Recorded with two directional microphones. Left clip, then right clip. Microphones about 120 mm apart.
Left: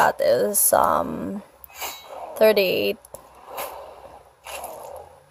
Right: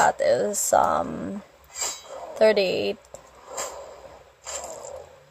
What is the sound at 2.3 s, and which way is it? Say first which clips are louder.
Speech: left 2 dB; 25° left (ahead or behind).